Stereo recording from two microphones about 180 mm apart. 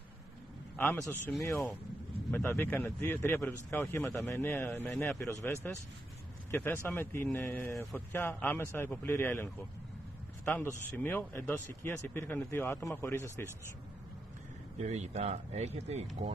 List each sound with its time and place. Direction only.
0.7 s speech: 10° left (ahead or behind)
14.8 s speech: 40° right (ahead or behind)